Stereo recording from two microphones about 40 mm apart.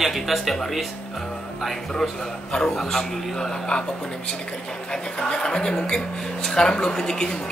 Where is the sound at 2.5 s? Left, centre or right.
Centre.